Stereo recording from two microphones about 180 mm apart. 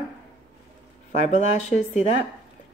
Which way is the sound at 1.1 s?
45° left (ahead or behind).